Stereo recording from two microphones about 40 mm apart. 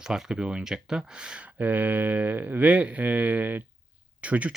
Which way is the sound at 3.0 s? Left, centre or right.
Right.